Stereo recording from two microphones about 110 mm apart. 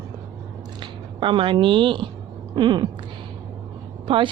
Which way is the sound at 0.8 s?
50° right (ahead or behind).